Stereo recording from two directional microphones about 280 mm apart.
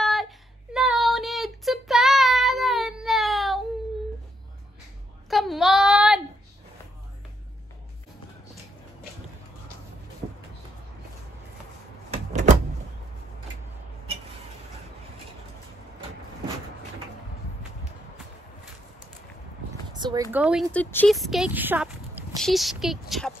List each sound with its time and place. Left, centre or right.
0.0 s a sound: centre
0.7 s child singing: centre
5.3 s child singing: centre
12.1 s cupboard open or close: right
19.9 s a sound: centre
20.3 s speech: centre